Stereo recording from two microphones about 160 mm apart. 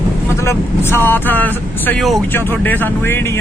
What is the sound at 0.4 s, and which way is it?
Speech, 15° left (ahead or behind).